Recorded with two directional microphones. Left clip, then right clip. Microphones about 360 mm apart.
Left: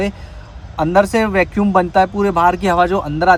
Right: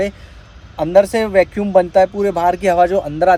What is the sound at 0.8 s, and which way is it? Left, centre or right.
Speech, centre.